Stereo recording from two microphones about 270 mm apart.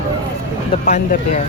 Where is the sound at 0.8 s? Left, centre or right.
Left.